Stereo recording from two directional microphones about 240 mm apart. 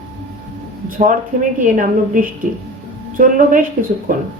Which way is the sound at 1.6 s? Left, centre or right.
Right.